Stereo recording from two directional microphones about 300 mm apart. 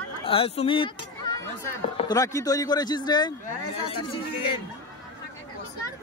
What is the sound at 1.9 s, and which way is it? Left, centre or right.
Speech, centre.